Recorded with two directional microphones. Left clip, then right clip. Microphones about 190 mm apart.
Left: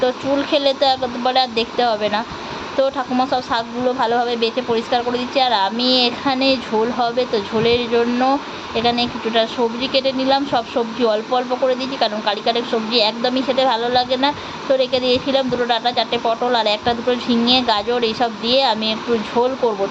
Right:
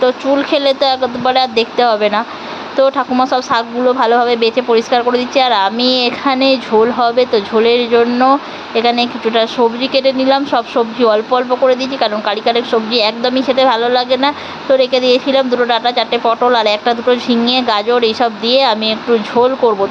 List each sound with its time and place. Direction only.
0.0 s speech: 15° right (ahead or behind)